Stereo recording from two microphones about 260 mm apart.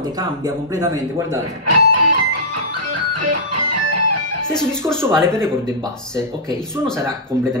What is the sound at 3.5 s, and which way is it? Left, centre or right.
Music, right.